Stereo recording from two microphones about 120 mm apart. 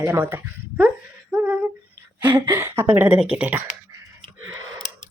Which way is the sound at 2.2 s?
20° right (ahead or behind).